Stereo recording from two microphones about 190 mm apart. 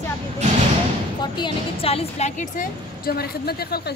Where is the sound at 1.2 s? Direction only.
25° left (ahead or behind); by 3.9 s 55° left (ahead or behind).